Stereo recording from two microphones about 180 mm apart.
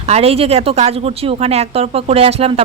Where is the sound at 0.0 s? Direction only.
35° right (ahead or behind).